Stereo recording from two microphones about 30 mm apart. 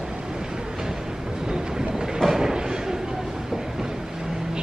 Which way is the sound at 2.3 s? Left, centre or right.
Centre.